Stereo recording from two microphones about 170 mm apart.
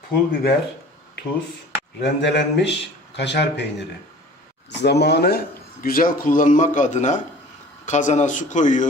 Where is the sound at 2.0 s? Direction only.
90° left.